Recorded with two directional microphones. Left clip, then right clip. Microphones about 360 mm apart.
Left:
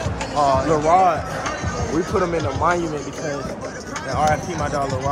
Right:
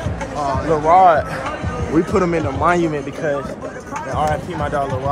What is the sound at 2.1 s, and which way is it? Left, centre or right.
Speech, right.